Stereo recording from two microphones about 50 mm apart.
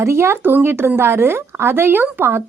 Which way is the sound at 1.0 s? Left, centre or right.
Right.